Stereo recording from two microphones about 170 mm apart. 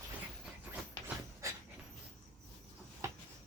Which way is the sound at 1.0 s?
15° right (ahead or behind).